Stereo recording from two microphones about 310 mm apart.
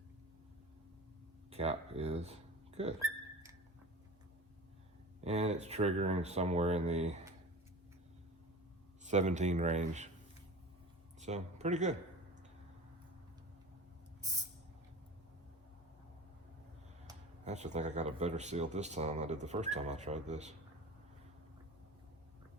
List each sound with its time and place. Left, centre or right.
1.5 s speech: centre
5.2 s speech: right
9.0 s speech: right
11.2 s speech: right
14.2 s spray: centre
17.1 s speech: right